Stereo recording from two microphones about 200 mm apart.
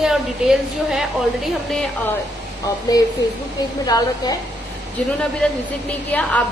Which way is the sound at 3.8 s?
20° left (ahead or behind).